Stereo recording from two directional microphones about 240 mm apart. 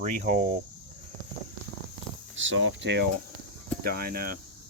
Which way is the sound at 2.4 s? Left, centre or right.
Right.